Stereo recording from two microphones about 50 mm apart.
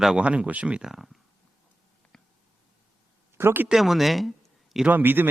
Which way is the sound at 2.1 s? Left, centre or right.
Centre.